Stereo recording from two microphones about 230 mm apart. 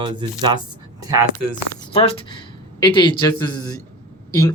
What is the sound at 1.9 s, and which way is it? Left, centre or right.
Speech, left.